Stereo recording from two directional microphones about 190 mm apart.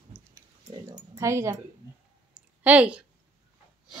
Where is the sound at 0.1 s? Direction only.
15° right (ahead or behind).